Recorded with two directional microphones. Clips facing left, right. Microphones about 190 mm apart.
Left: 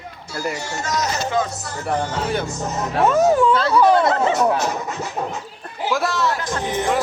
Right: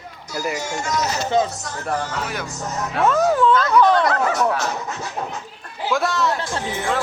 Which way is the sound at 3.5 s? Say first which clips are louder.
Even; 30° left (ahead or behind).